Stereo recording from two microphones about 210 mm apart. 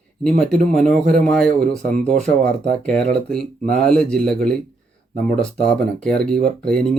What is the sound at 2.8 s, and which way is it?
Speech, 5° left (ahead or behind).